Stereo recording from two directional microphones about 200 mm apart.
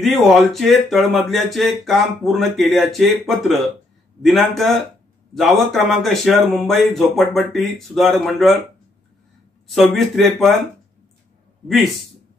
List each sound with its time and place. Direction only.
0.0 s speech: centre (ahead or behind)
9.7 s speech: centre (ahead or behind)
11.6 s speech: centre (ahead or behind)